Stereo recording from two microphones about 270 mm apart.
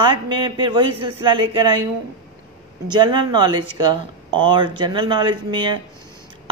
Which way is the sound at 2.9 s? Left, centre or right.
Centre.